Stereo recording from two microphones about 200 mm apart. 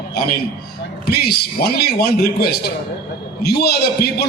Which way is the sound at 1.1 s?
50° left (ahead or behind).